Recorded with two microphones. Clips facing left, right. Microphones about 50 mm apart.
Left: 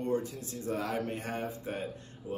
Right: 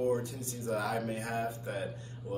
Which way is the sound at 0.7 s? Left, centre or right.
Left.